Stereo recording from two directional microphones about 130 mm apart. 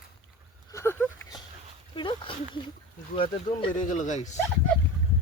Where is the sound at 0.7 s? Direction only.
20° left (ahead or behind).